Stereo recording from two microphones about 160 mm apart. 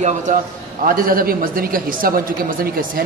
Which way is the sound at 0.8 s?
60° right (ahead or behind).